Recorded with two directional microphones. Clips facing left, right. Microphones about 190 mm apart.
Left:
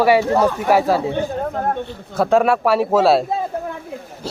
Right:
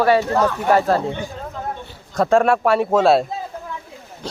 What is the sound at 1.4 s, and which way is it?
Speech, 60° left (ahead or behind).